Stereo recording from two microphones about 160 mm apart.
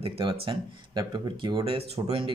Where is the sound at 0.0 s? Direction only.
35° right (ahead or behind).